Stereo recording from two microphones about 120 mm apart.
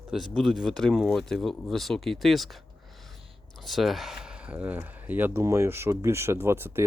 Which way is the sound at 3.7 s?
Centre (ahead or behind).